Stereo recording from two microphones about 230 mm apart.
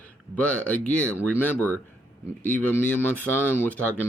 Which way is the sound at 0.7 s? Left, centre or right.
Centre.